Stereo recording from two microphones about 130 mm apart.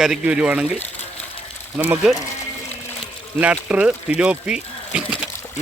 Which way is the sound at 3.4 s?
10° right (ahead or behind).